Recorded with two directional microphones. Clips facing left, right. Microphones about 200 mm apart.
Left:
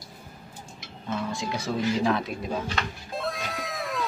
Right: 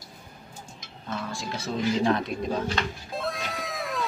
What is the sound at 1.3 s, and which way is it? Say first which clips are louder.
Speech: left 3 dB; 15° left (ahead or behind).